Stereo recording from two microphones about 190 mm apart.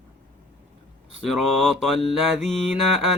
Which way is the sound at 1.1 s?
Centre (ahead or behind).